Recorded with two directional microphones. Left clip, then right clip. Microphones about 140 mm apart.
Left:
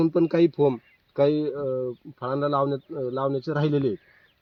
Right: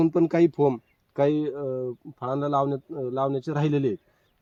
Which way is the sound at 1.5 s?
20° right (ahead or behind).